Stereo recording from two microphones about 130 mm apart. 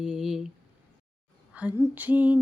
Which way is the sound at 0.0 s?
5° right (ahead or behind).